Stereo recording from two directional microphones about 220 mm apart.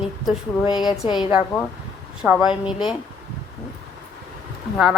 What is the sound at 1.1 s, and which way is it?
A man's voice, 5° right (ahead or behind).